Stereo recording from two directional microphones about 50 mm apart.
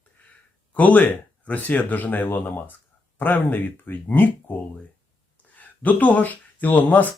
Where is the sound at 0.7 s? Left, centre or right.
Left.